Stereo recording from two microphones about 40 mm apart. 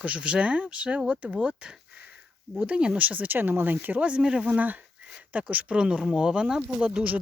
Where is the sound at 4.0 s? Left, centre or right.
Right.